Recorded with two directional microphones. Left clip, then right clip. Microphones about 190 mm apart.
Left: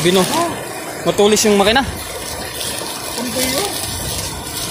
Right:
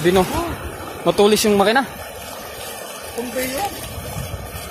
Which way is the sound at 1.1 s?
45° right (ahead or behind).